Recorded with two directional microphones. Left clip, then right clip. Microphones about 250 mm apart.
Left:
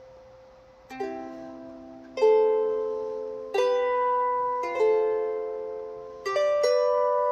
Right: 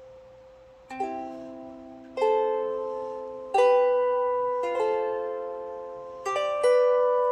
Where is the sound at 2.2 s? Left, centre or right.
Centre.